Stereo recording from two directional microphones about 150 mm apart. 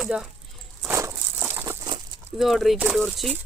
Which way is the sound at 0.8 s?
15° right (ahead or behind).